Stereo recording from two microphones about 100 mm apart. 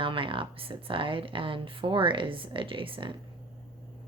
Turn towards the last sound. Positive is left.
turn(degrees=-60)  # may be behind; listen again after turning